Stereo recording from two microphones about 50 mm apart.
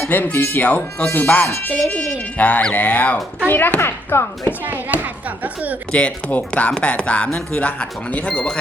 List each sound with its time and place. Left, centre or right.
0.1 s speech: left
3.8 s speech: left
4.6 s a child's voice: right
5.9 s speech: left